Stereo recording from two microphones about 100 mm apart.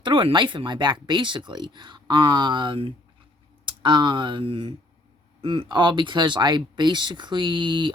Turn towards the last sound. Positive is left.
turn(degrees=-50)  # may be behind; listen again after turning